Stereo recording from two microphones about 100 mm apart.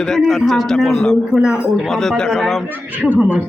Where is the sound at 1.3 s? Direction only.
5° right (ahead or behind).